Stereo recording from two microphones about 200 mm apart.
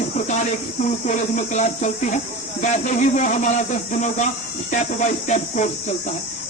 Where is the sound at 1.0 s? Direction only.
35° left (ahead or behind).